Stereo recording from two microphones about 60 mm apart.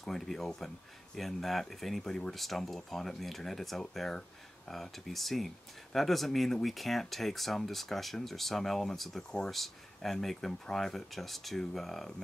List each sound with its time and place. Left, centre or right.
0.0 s speech: centre